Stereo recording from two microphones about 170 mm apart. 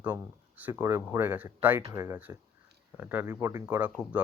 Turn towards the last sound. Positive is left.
turn(degrees=-10)  # may be behind; listen again after turning